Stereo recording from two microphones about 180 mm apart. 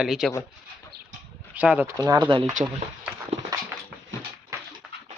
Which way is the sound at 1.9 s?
20° right (ahead or behind).